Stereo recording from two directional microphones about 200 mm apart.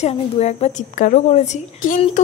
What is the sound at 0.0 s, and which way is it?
A woman's voice, 35° left (ahead or behind).